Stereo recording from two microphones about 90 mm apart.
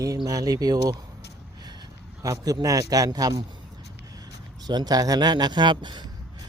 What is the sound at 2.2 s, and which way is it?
Speech, 40° right (ahead or behind).